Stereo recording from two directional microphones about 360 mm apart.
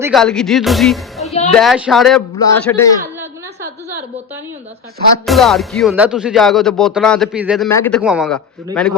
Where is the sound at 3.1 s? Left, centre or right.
Centre.